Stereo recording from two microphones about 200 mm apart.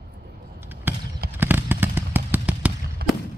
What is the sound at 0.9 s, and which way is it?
Basketball bounce, 10° right (ahead or behind).